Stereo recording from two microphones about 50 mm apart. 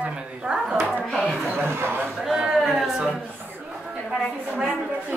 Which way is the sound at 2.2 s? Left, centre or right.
Centre.